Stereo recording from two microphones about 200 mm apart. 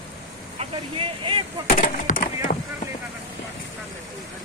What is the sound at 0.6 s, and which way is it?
Speech, 25° right (ahead or behind).